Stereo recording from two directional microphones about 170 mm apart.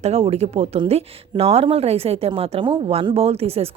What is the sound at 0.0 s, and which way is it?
Speech, 35° right (ahead or behind).